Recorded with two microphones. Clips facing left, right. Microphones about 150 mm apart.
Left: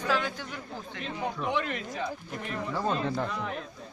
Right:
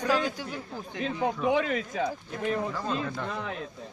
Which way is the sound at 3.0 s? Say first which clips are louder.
Left 3 dB; 30° left (ahead or behind).